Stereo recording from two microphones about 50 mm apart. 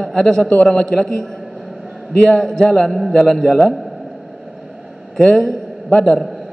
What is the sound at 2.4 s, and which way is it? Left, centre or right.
Speech, centre.